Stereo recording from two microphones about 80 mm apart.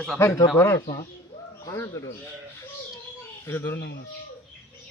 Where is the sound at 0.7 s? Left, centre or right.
Left.